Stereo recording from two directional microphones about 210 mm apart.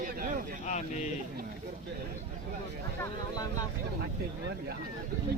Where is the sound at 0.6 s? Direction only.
35° left (ahead or behind).